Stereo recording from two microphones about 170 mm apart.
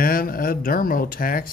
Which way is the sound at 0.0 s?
55° left (ahead or behind).